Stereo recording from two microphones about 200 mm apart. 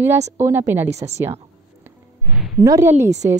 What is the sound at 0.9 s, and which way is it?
Speech, 35° right (ahead or behind).